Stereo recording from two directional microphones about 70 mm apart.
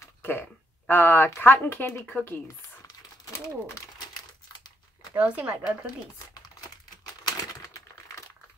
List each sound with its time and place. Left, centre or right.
0.2 s speech: left
4.2 s crumpling: left
5.1 s speech: right
7.2 s typewriter: left